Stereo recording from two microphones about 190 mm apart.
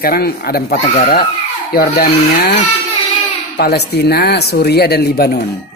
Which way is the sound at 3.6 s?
60° left (ahead or behind).